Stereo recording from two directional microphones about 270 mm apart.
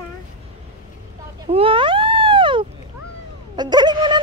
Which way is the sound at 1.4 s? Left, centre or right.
Right.